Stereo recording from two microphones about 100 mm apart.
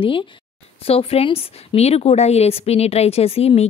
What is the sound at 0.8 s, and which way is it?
A woman's voice, 75° left (ahead or behind).